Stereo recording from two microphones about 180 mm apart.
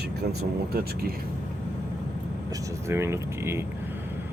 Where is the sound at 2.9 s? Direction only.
15° right (ahead or behind).